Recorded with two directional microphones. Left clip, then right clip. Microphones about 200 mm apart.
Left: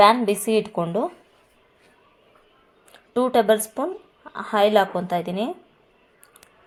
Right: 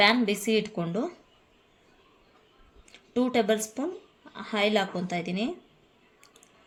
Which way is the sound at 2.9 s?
15° left (ahead or behind).